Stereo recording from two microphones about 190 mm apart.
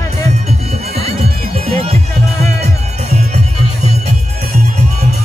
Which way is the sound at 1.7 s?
30° right (ahead or behind).